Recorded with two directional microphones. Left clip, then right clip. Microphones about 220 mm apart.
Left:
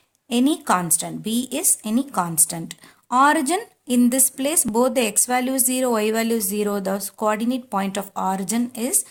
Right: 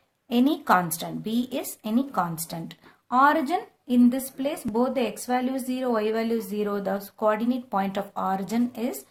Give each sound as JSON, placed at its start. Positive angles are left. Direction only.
{"t": 0.3, "sound": "a woman's voice", "side_deg": 25}